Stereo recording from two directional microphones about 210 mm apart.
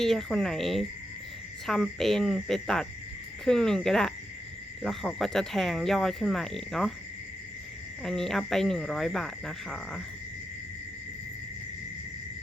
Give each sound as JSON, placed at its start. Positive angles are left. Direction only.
{"t": 0.0, "sound": "speech", "side_deg": 0}
{"t": 8.0, "sound": "speech", "side_deg": 0}